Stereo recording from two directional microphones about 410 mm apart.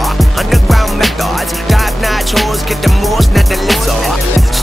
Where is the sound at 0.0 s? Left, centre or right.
Centre.